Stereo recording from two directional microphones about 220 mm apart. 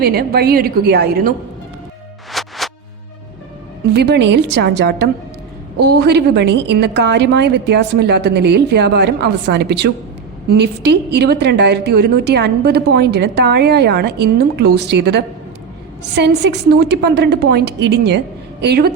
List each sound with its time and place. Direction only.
0.0 s a woman's voice: 45° right (ahead or behind)
2.3 s music: centre (ahead or behind)
3.9 s a woman's voice: 50° right (ahead or behind)